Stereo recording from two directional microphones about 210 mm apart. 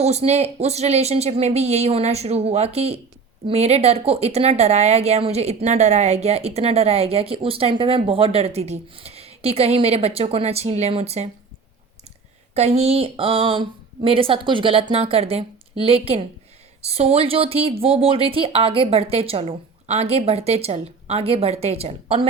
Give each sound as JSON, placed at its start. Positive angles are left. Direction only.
{"t": 0.0, "sound": "speech", "side_deg": -30}
{"t": 12.5, "sound": "speech", "side_deg": -30}